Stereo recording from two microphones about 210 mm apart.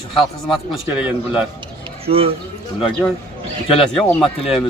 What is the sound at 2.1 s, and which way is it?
Speech, 25° right (ahead or behind).